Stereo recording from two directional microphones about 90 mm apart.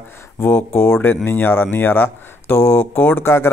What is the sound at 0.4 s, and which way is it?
Speech, 25° left (ahead or behind).